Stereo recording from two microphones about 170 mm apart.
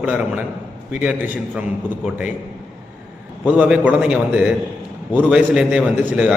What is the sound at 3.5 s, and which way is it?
A man's voice, 10° right (ahead or behind).